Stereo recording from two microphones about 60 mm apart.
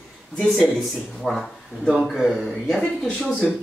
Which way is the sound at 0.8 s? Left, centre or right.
Centre.